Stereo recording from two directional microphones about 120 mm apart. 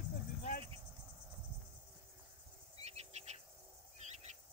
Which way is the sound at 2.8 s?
60° right (ahead or behind).